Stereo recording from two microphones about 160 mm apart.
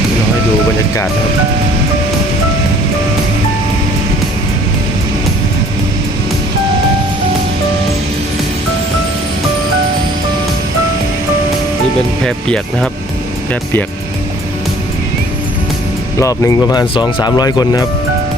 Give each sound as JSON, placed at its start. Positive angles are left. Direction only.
{"t": 12.2, "sound": "speech", "side_deg": 5}
{"t": 16.1, "sound": "speech", "side_deg": 20}